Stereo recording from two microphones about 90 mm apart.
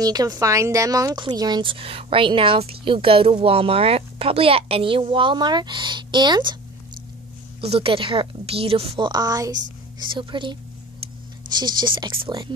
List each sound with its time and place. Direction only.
0.0 s a woman's voice: 45° right (ahead or behind)
1.7 s a woman's voice: 85° right; by 6.5 s 55° right (ahead or behind)
7.6 s a woman's voice: 90° right
9.1 s a woman's voice: 45° right (ahead or behind); by 12.5 s 60° right (ahead or behind)